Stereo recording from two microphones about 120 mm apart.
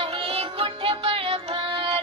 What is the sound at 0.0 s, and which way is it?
Music, 50° right (ahead or behind).